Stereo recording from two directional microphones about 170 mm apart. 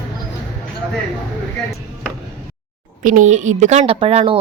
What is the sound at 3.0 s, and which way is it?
A woman's voice, 50° right (ahead or behind).